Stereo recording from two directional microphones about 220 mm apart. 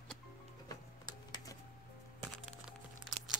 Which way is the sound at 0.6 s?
15° left (ahead or behind).